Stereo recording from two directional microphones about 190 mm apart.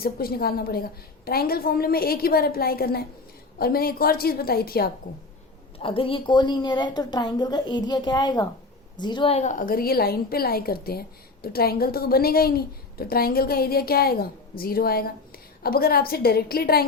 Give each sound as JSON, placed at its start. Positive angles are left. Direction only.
{"t": 0.0, "sound": "a woman's voice", "side_deg": 50}
{"t": 5.8, "sound": "a woman's voice", "side_deg": 30}